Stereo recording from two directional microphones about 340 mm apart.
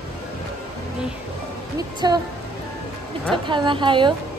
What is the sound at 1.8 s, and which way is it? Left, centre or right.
Speech, centre.